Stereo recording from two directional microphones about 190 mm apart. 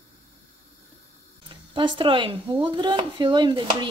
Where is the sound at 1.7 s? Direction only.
25° right (ahead or behind).